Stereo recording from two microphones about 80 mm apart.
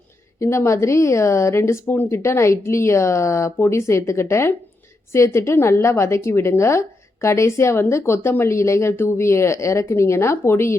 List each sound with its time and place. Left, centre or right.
0.3 s a woman's voice: left